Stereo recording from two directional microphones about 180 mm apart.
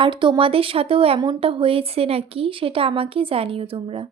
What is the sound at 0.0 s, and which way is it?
Speech, 25° right (ahead or behind).